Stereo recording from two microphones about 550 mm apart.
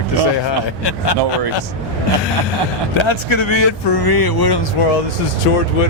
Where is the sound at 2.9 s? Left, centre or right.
Left.